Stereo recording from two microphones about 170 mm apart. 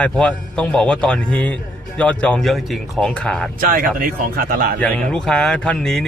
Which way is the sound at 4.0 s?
55° right (ahead or behind).